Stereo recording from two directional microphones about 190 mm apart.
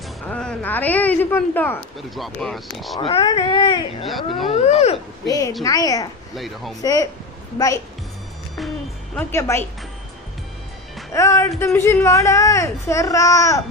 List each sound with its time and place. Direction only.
0.3 s speech: 5° left (ahead or behind)
3.0 s speech: 30° left (ahead or behind)
4.4 s vehicle: 30° left (ahead or behind)
5.2 s speech: 20° left (ahead or behind)
6.3 s speech: centre (ahead or behind)
6.8 s speech: 20° left (ahead or behind)
9.1 s speech: 15° left (ahead or behind)
11.1 s speech: 15° left (ahead or behind)